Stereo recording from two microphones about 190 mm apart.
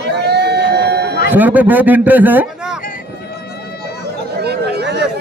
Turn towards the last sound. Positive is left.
turn(degrees=-60)  # may be behind; listen again after turning